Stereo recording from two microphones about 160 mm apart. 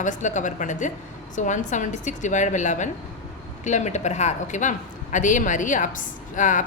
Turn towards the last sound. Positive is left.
turn(degrees=55)  # may be behind; listen again after turning